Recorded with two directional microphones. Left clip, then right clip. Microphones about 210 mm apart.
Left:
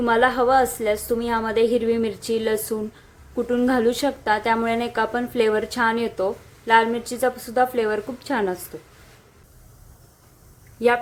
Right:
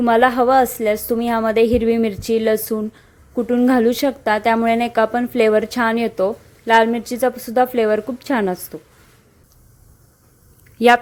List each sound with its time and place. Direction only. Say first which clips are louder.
0.0 s a woman's voice: right 4 dB; 30° right (ahead or behind)
10.8 s a woman's voice: right 7 dB; 45° right (ahead or behind)